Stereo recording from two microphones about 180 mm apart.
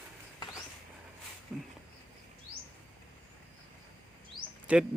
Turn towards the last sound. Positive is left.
turn(degrees=5)  # may be behind; listen again after turning